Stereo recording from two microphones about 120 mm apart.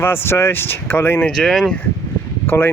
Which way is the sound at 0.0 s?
20° left (ahead or behind).